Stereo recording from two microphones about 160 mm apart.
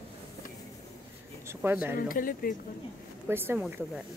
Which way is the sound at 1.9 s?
60° left (ahead or behind).